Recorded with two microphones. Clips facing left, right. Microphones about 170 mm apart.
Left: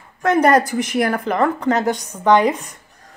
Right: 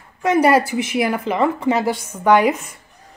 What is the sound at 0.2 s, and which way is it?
A woman's voice, 10° right (ahead or behind).